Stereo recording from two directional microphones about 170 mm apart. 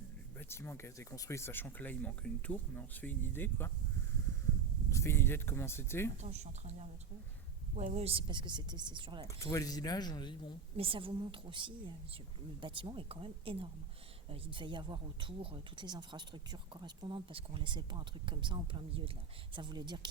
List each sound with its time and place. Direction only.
0.3 s speech: 15° left (ahead or behind)
4.9 s speech: 15° left (ahead or behind)
6.2 s speech: 40° right (ahead or behind)
9.2 s speech: 15° left (ahead or behind)
10.8 s speech: 30° right (ahead or behind)